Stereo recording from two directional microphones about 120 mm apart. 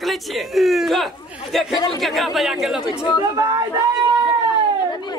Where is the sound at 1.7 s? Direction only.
40° left (ahead or behind).